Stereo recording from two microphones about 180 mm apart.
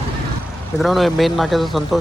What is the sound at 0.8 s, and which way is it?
Speech, centre (ahead or behind).